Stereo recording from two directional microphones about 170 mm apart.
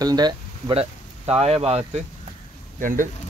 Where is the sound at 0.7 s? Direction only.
40° right (ahead or behind).